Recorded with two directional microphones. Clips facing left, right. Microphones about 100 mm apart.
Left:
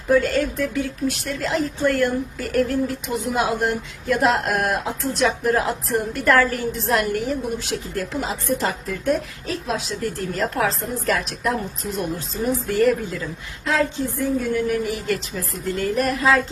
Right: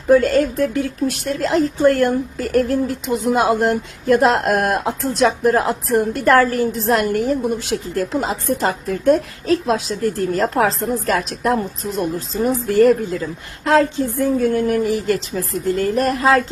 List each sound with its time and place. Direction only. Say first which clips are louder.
0.1 s speech: right 5 dB; 40° right (ahead or behind)
14.8 s speech: right 6 dB; 35° right (ahead or behind)